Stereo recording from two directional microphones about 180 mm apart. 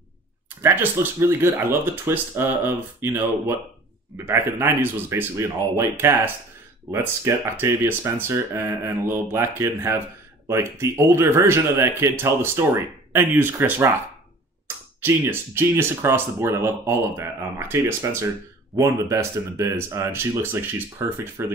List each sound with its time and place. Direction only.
0.6 s speech: 15° right (ahead or behind)
15.0 s speech: 10° right (ahead or behind)